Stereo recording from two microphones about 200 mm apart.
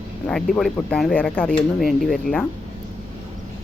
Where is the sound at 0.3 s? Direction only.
5° left (ahead or behind).